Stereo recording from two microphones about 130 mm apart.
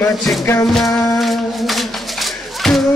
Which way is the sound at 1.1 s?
Centre (ahead or behind).